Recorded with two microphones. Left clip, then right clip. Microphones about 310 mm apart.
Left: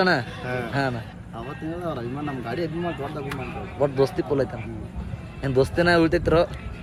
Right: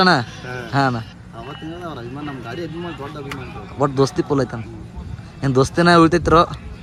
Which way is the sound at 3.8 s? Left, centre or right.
Centre.